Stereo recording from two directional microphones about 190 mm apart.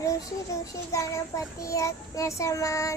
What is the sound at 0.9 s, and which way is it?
Child singing, 15° left (ahead or behind).